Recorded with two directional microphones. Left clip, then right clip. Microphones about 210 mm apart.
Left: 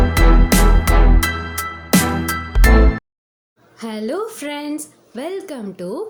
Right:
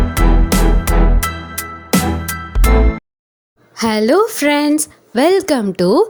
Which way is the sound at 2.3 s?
Centre (ahead or behind).